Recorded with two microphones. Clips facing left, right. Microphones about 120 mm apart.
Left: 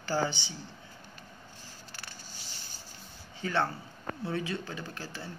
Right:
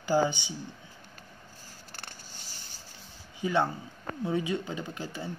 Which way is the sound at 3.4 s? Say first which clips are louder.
Right 3 dB; 15° right (ahead or behind).